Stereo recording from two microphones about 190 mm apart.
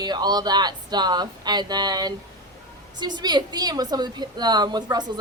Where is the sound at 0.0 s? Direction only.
20° right (ahead or behind).